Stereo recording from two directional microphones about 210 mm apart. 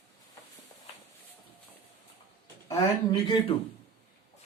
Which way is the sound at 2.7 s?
20° left (ahead or behind).